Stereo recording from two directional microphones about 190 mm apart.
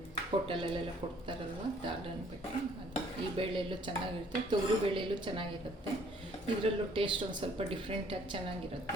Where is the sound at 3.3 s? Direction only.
25° right (ahead or behind).